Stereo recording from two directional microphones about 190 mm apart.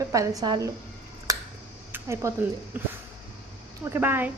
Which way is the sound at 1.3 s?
20° right (ahead or behind).